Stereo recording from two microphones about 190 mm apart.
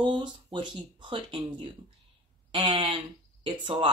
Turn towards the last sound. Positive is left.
turn(degrees=-25)  # may be behind; listen again after turning